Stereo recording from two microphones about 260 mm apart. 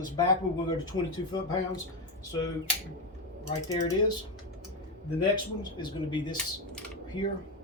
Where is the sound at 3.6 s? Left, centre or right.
Centre.